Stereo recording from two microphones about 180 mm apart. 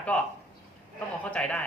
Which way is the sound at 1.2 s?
5° left (ahead or behind).